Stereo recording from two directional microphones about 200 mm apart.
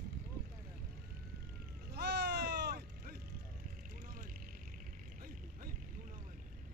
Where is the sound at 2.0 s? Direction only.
55° right (ahead or behind).